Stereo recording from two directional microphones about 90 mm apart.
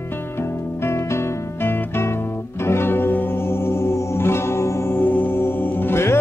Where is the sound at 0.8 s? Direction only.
30° left (ahead or behind).